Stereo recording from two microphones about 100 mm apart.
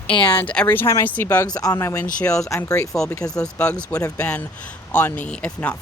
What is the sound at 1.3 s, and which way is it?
Speech, 40° left (ahead or behind).